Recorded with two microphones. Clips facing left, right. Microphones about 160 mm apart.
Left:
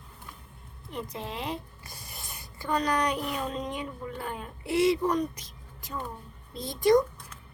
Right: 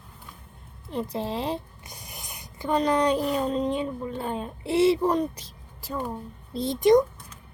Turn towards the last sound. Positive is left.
turn(degrees=-20)  # may be behind; listen again after turning